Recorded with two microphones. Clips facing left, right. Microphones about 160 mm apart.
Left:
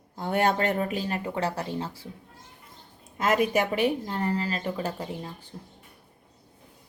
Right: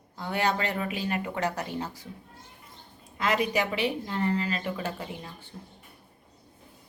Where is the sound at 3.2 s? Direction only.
50° left (ahead or behind).